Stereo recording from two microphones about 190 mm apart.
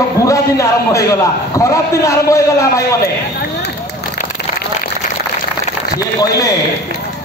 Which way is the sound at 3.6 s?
55° left (ahead or behind).